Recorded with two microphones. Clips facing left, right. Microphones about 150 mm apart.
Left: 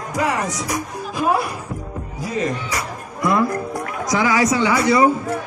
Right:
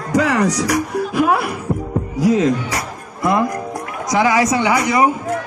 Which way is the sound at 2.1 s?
90° right.